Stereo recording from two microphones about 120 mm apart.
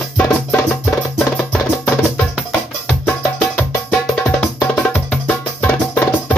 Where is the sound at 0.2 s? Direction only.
15° left (ahead or behind).